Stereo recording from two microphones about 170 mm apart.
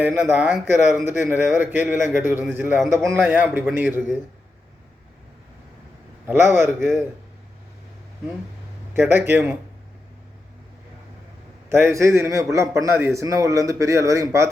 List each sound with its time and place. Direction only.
0.0 s a man's voice: 15° right (ahead or behind)
6.2 s a man's voice: 15° right (ahead or behind)
8.9 s a man's voice: 15° right (ahead or behind)
11.7 s a man's voice: 15° right (ahead or behind)